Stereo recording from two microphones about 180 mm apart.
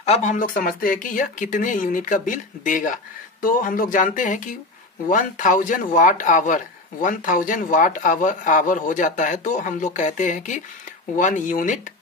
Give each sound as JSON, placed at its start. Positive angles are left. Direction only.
{"t": 0.0, "sound": "speech", "side_deg": 35}